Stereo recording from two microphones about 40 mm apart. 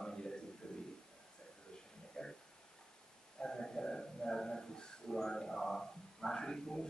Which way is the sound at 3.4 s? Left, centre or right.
Centre.